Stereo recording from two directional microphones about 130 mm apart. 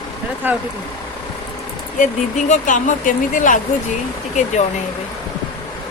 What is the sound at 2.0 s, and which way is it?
Speech, 70° left (ahead or behind).